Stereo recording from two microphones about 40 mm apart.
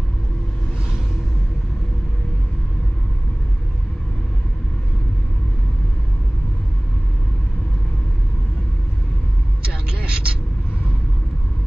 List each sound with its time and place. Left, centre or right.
9.7 s vehicle: right